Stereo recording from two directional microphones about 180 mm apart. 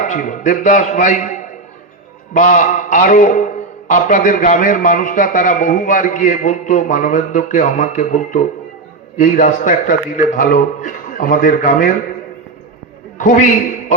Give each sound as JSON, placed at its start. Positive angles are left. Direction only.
{"t": 0.0, "sound": "a man's voice", "side_deg": 45}
{"t": 13.1, "sound": "a man's voice", "side_deg": 45}